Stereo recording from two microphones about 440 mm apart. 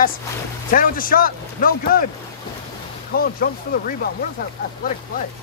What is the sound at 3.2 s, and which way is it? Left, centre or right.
Speech, centre.